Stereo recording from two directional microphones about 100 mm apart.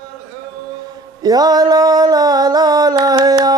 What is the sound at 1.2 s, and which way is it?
Music, 40° right (ahead or behind).